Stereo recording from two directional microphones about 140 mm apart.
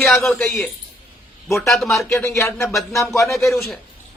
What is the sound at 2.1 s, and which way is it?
Speech, 20° left (ahead or behind).